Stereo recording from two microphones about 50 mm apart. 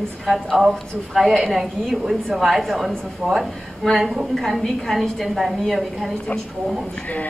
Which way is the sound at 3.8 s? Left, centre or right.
Centre.